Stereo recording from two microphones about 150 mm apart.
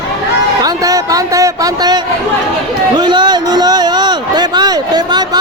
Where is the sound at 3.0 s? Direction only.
30° right (ahead or behind).